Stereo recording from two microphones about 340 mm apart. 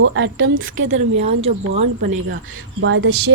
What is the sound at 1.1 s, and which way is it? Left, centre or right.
Speech, centre.